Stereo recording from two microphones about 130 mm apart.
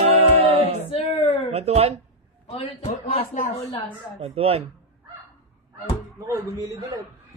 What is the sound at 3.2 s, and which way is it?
Speech, 90° left.